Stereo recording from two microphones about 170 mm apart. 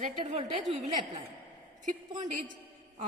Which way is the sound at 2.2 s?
50° right (ahead or behind).